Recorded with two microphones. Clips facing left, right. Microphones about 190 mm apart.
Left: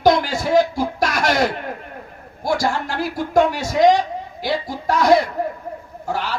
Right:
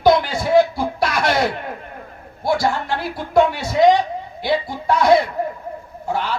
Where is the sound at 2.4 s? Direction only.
45° left (ahead or behind).